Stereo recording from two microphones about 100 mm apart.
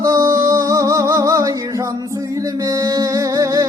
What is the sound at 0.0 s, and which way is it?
Music, 35° right (ahead or behind).